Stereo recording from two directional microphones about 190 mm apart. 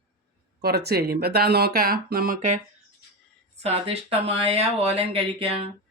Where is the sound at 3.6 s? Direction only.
30° right (ahead or behind).